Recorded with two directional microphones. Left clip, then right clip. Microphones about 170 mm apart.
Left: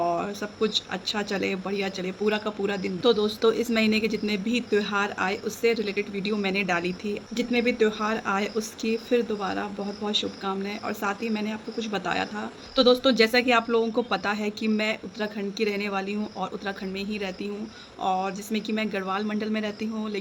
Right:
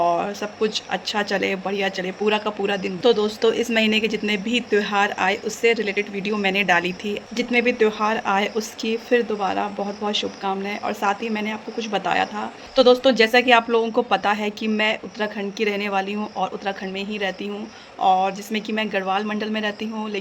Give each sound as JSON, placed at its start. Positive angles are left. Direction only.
{"t": 0.0, "sound": "speech", "side_deg": 15}